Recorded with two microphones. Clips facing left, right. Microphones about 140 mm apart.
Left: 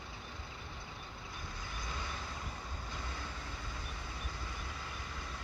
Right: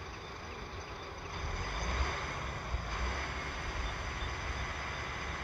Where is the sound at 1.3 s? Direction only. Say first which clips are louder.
Right 5 dB; 60° right (ahead or behind).